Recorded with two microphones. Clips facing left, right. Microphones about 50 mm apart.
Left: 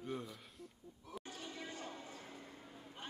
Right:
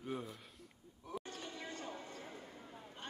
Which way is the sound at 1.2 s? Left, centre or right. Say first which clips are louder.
Right 1 dB; centre.